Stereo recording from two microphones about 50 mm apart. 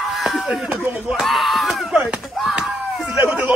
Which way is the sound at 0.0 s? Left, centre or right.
Centre.